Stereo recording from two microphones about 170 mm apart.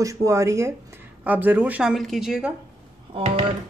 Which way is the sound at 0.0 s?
20° right (ahead or behind).